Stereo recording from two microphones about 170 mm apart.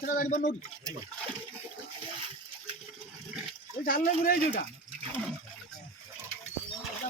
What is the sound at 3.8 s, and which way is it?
Speech, 55° left (ahead or behind).